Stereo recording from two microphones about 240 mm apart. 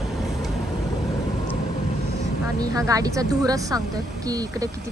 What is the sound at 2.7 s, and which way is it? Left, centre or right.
A woman's voice, centre.